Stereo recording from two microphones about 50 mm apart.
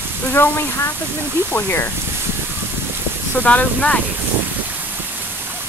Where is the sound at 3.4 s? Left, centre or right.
Left.